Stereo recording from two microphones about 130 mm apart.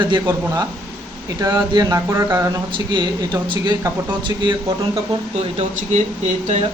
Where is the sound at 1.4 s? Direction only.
30° right (ahead or behind).